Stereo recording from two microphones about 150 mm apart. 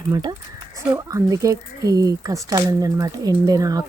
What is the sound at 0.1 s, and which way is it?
Speech, 25° right (ahead or behind).